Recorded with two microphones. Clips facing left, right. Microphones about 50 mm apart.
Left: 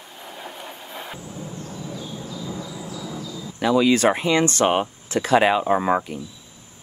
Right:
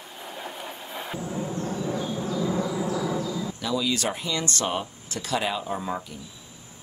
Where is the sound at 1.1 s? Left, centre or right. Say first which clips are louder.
Right 5 dB; right.